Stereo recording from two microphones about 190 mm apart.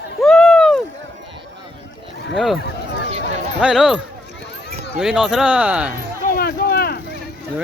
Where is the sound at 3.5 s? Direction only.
5° right (ahead or behind).